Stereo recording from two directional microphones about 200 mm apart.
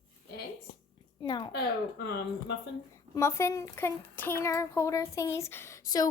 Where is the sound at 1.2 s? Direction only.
25° left (ahead or behind).